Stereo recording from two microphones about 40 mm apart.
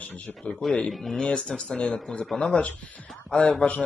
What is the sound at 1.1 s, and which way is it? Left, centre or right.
Speech, left.